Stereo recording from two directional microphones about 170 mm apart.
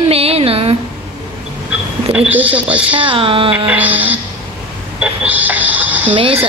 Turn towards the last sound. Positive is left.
turn(degrees=-35)  # may be behind; listen again after turning